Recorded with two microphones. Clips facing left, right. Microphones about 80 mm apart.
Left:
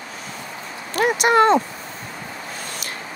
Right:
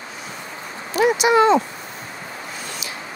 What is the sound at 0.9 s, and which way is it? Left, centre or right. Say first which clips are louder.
Speech: right 1 dB; left.